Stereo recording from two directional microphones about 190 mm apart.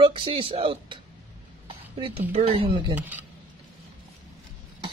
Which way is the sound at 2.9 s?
10° right (ahead or behind).